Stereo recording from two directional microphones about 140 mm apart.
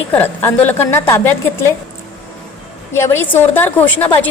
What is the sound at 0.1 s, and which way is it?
A woman's voice, 15° left (ahead or behind).